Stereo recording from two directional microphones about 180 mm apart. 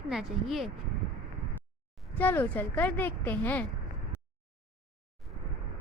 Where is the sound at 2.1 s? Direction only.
10° left (ahead or behind).